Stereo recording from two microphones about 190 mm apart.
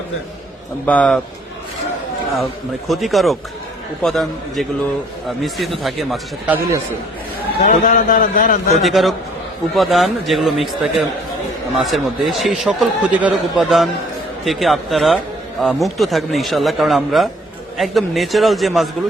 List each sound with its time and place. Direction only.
0.9 s speech: 5° left (ahead or behind)
2.4 s speech: centre (ahead or behind)
7.6 s a man's voice: 40° left (ahead or behind)
8.8 s speech: centre (ahead or behind)